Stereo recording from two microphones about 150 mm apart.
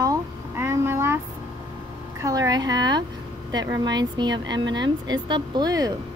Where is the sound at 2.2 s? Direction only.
25° right (ahead or behind).